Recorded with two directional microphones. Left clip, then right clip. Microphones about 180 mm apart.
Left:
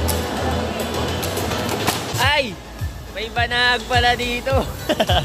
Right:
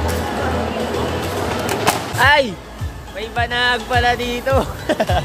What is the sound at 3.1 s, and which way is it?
Speech, 5° right (ahead or behind).